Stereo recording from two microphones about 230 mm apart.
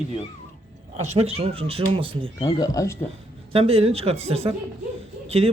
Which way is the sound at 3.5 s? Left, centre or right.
Right.